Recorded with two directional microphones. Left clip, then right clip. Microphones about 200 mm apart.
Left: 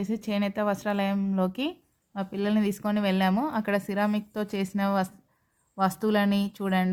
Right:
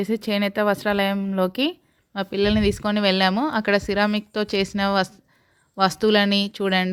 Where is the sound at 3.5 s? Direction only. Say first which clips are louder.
Right 7 dB; 50° right (ahead or behind).